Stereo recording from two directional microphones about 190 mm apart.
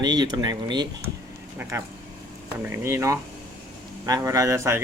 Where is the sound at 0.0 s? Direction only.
20° right (ahead or behind).